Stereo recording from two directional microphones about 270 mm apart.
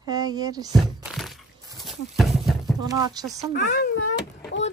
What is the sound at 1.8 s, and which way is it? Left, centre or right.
Horse, centre.